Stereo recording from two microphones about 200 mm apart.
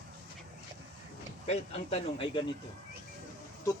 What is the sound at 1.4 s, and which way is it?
Speech, 30° left (ahead or behind).